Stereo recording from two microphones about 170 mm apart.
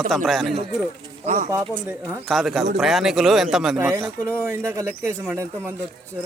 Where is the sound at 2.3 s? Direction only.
Centre (ahead or behind).